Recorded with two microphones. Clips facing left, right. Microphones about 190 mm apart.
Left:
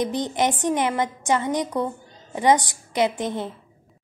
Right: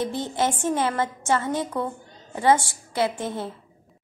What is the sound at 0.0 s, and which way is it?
A woman's voice, 15° left (ahead or behind).